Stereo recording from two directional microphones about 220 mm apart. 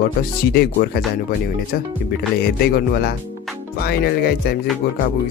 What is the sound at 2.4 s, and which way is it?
Speech, 45° left (ahead or behind).